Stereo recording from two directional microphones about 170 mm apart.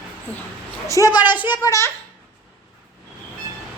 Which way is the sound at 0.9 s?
20° left (ahead or behind).